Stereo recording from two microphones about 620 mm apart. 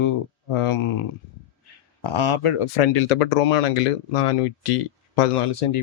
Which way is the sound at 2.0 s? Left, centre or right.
Left.